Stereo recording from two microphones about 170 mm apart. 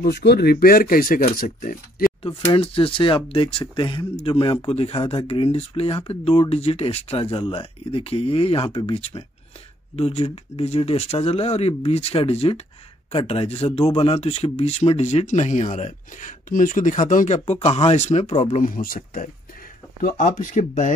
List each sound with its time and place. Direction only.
0.0 s speech: 75° left (ahead or behind); by 2.0 s 55° left (ahead or behind)
2.5 s speech: 35° left (ahead or behind)